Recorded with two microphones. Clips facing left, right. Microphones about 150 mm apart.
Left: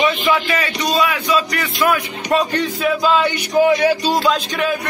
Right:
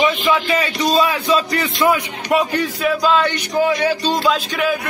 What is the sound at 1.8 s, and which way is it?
Speech, 15° right (ahead or behind).